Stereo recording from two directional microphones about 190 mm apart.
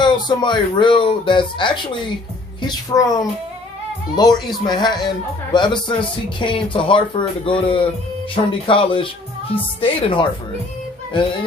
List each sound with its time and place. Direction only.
0.0 s speech: 25° left (ahead or behind)